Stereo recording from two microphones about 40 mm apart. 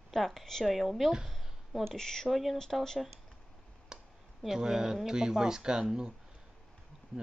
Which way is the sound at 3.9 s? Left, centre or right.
Centre.